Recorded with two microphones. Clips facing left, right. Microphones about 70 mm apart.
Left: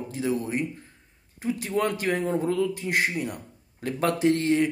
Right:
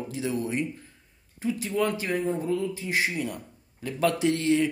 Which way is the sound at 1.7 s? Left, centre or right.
Left.